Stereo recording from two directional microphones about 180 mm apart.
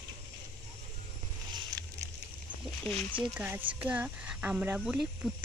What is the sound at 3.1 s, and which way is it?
Speech, 10° right (ahead or behind).